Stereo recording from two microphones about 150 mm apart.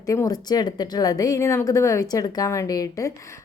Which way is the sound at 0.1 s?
25° left (ahead or behind).